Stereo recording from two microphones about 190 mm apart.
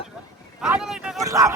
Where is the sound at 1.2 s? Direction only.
15° right (ahead or behind).